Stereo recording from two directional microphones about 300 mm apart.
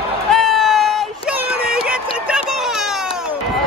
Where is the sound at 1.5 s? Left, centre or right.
Centre.